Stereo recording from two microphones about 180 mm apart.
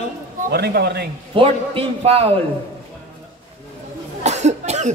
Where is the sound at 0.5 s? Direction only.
65° right (ahead or behind).